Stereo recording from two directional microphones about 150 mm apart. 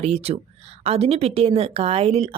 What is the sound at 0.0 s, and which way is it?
Speech, 45° right (ahead or behind).